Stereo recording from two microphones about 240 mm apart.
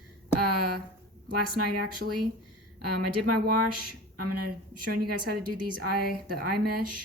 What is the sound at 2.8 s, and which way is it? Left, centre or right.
A woman's voice, right.